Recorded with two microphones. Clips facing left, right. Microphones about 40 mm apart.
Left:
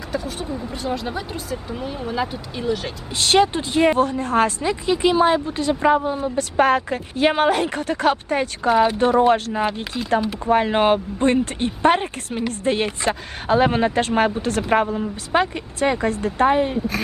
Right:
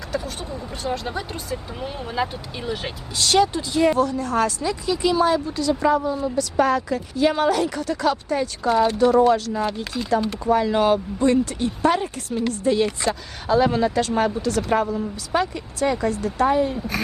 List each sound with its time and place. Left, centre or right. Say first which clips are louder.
0.3 s speech: left 3 dB; centre
3.2 s speech: left 2 dB; left
10.2 s speech: left 1 dB; centre
10.4 s speech: left 2 dB; left